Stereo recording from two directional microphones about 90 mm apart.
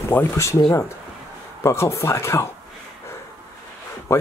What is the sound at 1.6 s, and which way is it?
Speech, 30° left (ahead or behind).